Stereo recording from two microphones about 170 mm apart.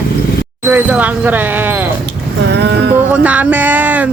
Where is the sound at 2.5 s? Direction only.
85° right.